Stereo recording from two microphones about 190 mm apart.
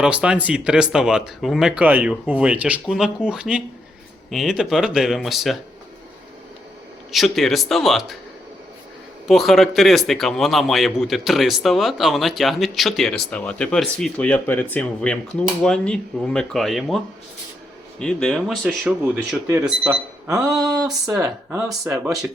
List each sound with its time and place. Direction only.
0.0 s a man's voice: 5° right (ahead or behind)
7.1 s a man's voice: centre (ahead or behind)
9.2 s a man's voice: centre (ahead or behind)
18.0 s a man's voice: 5° left (ahead or behind)